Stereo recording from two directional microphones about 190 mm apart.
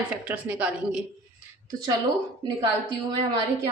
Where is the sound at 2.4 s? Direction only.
25° right (ahead or behind).